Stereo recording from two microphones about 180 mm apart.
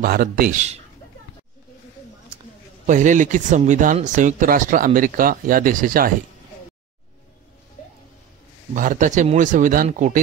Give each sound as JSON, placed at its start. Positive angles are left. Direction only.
{"t": 0.0, "sound": "speech", "side_deg": -55}
{"t": 2.9, "sound": "speech", "side_deg": -45}
{"t": 8.7, "sound": "speech", "side_deg": -45}